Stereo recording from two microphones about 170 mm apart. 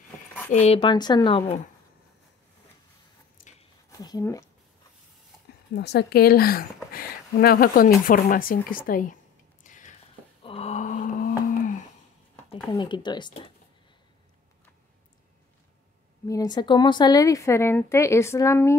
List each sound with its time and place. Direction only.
0.5 s speech: 35° left (ahead or behind)
3.9 s speech: 20° left (ahead or behind)
5.8 s speech: 75° left (ahead or behind); by 9.1 s 55° left (ahead or behind)
9.6 s a sound: 50° left (ahead or behind)
10.4 s a sound: 35° left (ahead or behind); by 11.7 s 55° left (ahead or behind)
12.7 s speech: 25° left (ahead or behind)
16.3 s a woman's voice: 20° left (ahead or behind)